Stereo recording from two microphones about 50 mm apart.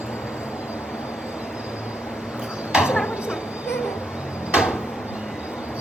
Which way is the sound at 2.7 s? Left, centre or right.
Centre.